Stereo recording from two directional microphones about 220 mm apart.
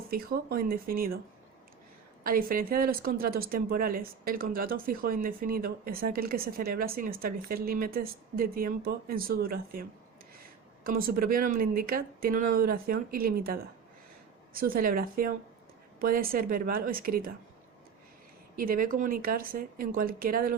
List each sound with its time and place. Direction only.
0.1 s speech: 45° right (ahead or behind)
2.2 s a woman's voice: 40° right (ahead or behind)
10.8 s a woman's voice: 40° right (ahead or behind)
18.5 s a woman's voice: 40° right (ahead or behind)